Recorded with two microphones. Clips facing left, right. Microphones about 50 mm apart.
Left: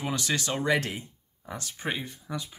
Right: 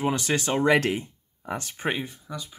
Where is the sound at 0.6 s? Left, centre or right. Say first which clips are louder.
Right 7 dB; right.